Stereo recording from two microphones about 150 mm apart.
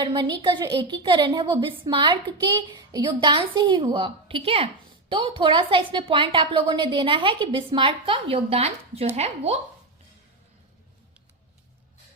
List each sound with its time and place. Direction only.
0.0 s a woman's voice: 30° right (ahead or behind); by 9.6 s 45° right (ahead or behind)